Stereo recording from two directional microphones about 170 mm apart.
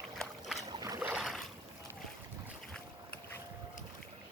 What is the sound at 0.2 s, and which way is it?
Boat, centre (ahead or behind).